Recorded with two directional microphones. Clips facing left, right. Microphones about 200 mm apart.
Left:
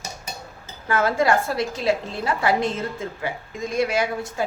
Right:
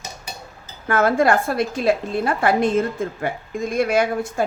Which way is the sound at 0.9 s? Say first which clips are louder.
Right 3 dB; 55° right (ahead or behind).